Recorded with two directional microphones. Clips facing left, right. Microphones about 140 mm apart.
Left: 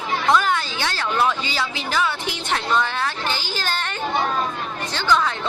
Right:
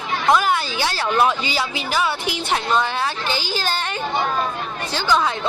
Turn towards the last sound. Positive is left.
turn(degrees=-10)  # may be behind; listen again after turning